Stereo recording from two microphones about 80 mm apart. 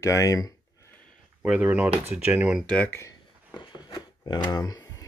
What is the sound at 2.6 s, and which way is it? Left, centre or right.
Speech, centre.